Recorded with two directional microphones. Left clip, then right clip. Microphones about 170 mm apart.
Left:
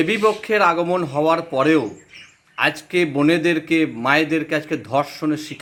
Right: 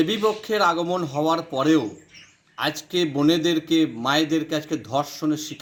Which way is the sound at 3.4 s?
15° right (ahead or behind).